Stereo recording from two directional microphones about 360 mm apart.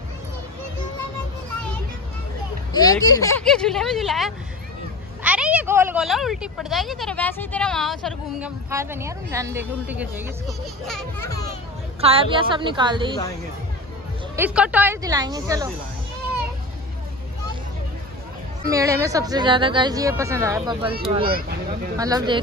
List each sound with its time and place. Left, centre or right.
2.7 s speech: centre
12.0 s speech: centre
14.3 s speech: centre
18.7 s speech: centre
20.9 s speech: centre